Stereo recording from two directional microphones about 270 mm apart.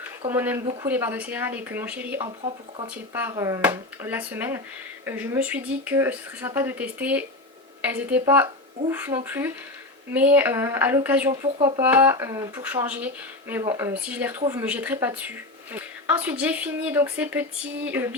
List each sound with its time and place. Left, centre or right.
0.3 s speech: centre
0.6 s speech: centre
0.9 s a woman's voice: centre